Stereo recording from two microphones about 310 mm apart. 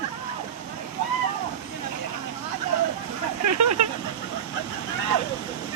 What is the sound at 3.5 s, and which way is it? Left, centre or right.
Speech, right.